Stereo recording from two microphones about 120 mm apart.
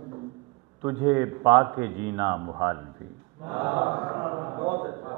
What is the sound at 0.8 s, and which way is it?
A man's voice, 25° right (ahead or behind).